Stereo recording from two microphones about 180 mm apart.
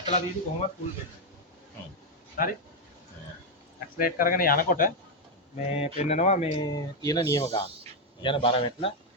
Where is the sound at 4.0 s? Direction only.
50° left (ahead or behind).